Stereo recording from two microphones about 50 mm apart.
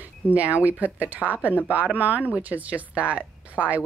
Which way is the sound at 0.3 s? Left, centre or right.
Right.